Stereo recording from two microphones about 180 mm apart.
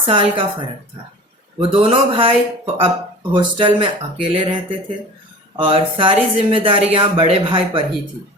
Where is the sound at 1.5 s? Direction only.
30° right (ahead or behind).